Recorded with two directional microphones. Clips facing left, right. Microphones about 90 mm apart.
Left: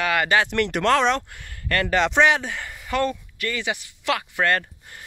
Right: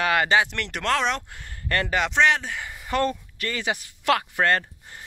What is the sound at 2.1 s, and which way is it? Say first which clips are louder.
Speech: right 1 dB; 5° left (ahead or behind).